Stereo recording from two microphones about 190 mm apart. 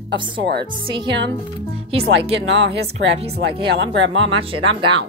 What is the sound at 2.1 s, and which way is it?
Speech, 75° right (ahead or behind).